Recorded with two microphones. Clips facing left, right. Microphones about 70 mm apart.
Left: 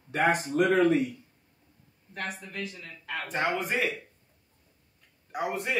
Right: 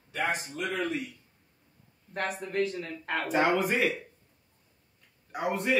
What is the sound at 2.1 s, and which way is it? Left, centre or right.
Speech, right.